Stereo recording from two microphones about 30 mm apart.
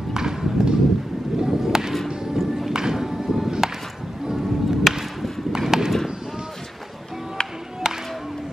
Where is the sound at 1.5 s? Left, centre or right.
Centre.